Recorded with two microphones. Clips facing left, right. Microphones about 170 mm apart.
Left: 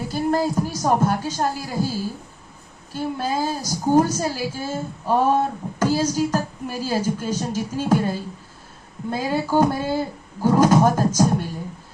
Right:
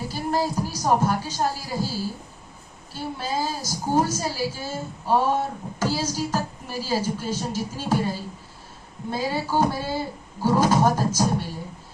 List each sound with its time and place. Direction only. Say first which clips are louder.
0.1 s a sound: left 5 dB; 50° left (ahead or behind)
0.8 s a woman's voice: left 1 dB; 50° left (ahead or behind)
2.9 s a woman's voice: left 4 dB; 50° left (ahead or behind)